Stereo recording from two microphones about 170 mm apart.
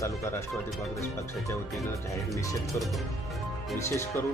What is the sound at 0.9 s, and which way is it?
Speech, 15° left (ahead or behind).